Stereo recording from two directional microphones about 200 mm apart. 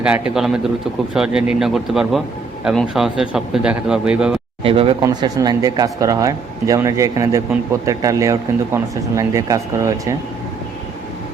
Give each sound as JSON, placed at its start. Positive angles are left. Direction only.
{"t": 0.0, "sound": "speech", "side_deg": -5}
{"t": 4.6, "sound": "speech", "side_deg": -25}